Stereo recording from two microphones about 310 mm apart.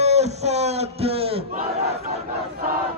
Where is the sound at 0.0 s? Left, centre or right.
Right.